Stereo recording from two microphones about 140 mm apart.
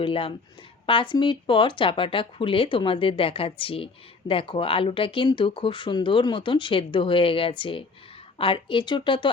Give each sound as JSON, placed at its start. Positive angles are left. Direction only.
{"t": 0.0, "sound": "speech", "side_deg": 40}